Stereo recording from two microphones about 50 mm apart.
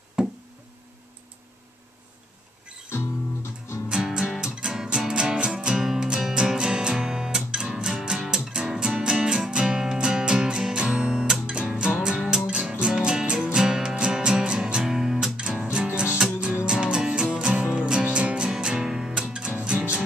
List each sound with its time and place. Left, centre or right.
0.2 s a sound: centre
2.9 s music: left
3.9 s music: centre